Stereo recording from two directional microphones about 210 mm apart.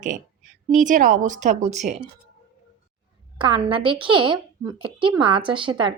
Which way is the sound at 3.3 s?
25° right (ahead or behind).